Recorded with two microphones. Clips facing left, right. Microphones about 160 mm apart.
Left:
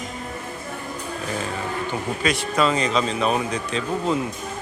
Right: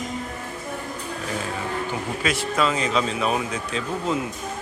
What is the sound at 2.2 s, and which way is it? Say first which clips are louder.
Speech: left 2 dB; 5° right (ahead or behind).